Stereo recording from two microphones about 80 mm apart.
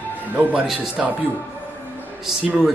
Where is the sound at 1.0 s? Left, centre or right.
Centre.